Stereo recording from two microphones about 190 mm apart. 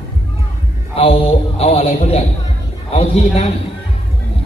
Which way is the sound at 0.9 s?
30° left (ahead or behind).